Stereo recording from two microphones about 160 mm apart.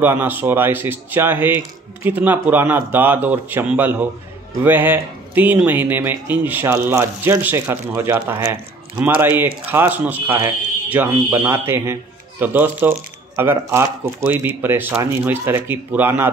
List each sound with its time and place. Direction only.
0.0 s speech: 10° right (ahead or behind)
9.2 s speech: 15° right (ahead or behind)